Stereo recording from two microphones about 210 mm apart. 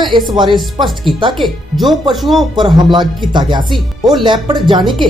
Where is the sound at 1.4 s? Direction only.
Centre (ahead or behind).